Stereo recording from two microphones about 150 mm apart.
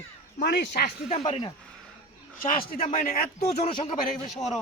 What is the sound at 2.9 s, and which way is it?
Speech, 60° left (ahead or behind).